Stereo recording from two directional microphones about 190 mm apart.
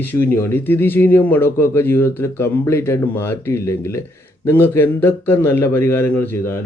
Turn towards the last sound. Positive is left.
turn(degrees=10)  # may be behind; listen again after turning